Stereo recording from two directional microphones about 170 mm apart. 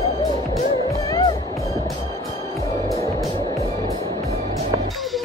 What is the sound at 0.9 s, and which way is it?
Music, 20° left (ahead or behind).